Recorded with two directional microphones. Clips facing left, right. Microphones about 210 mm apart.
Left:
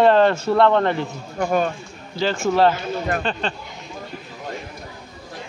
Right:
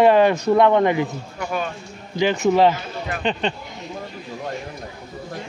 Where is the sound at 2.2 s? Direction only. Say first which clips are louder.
Right 2 dB; 15° right (ahead or behind).